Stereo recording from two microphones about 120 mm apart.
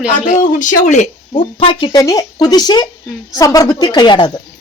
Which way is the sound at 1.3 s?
40° left (ahead or behind).